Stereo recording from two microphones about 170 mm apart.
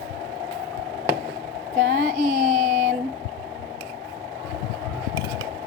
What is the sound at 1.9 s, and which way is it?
Child singing, 55° right (ahead or behind).